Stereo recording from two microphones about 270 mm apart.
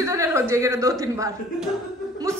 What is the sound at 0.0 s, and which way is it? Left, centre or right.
A woman's voice, centre.